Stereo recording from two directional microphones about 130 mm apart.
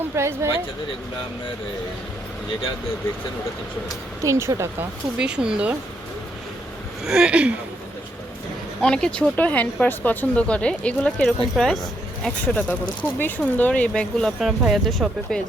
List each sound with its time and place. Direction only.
0.2 s speech: 20° right (ahead or behind)
4.2 s speech: 25° right (ahead or behind)
5.1 s speech: 5° right (ahead or behind)
7.0 s speech: 5° right (ahead or behind)
8.8 s speech: 5° left (ahead or behind)